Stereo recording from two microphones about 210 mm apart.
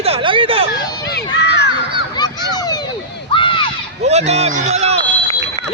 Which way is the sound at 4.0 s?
30° right (ahead or behind).